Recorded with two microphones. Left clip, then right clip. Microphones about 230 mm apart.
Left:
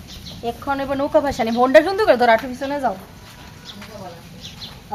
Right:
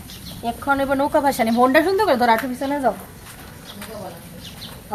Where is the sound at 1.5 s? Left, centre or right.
Centre.